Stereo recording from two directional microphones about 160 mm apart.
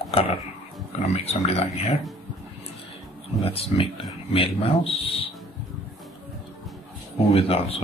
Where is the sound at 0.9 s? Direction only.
40° left (ahead or behind).